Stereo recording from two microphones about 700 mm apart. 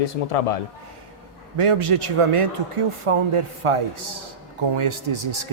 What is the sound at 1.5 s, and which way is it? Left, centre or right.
Speech, right.